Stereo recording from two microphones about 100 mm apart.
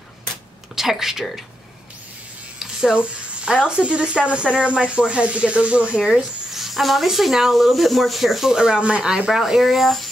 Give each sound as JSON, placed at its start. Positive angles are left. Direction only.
{"t": 0.7, "sound": "speech", "side_deg": -5}
{"t": 2.6, "sound": "a sound", "side_deg": -5}
{"t": 3.3, "sound": "speech", "side_deg": -10}